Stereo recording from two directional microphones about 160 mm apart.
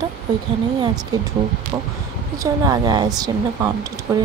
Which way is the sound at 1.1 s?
25° right (ahead or behind).